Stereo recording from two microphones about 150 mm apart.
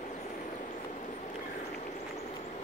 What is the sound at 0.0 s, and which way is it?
Vehicle, 50° left (ahead or behind).